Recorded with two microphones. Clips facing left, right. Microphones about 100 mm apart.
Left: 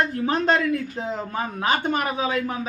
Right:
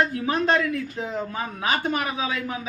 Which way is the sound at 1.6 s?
40° left (ahead or behind).